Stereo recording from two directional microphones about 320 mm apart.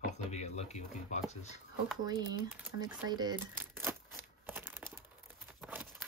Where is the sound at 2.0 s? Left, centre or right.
Centre.